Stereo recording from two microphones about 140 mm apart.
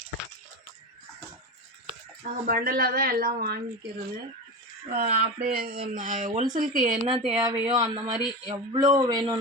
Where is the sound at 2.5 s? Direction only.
90° right.